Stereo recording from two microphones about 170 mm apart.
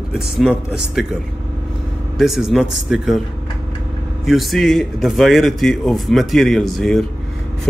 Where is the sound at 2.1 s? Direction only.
Centre (ahead or behind).